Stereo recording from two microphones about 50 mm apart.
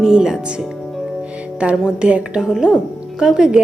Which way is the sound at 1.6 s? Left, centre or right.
Right.